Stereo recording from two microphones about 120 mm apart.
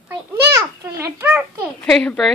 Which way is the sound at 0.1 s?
25° right (ahead or behind).